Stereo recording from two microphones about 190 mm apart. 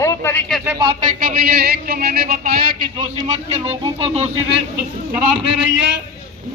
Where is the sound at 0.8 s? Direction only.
20° right (ahead or behind).